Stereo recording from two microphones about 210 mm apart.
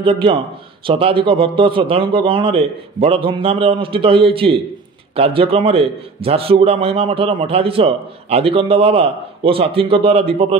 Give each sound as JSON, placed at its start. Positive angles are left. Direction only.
{"t": 0.0, "sound": "a man's voice", "side_deg": -25}